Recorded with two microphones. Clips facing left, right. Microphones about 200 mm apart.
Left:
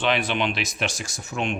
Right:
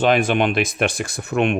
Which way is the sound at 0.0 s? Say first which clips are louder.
Right 7 dB; 45° right (ahead or behind).